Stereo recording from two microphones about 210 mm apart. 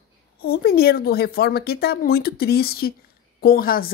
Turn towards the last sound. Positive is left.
turn(degrees=45)  # may be behind; listen again after turning